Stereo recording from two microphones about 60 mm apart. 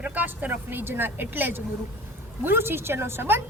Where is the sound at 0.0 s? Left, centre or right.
Right.